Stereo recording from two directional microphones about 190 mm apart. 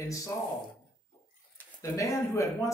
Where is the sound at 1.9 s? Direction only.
15° left (ahead or behind).